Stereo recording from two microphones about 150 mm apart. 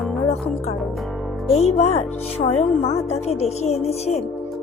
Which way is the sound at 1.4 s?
45° left (ahead or behind).